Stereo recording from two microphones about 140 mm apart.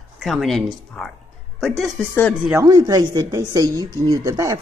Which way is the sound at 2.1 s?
10° left (ahead or behind).